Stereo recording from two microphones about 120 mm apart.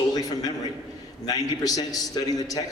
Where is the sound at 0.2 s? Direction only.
30° left (ahead or behind).